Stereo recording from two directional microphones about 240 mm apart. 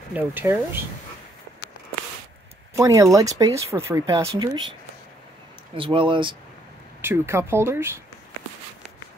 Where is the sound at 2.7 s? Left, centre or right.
Centre.